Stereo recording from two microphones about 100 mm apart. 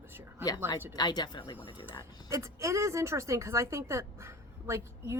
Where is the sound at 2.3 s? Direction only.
30° right (ahead or behind).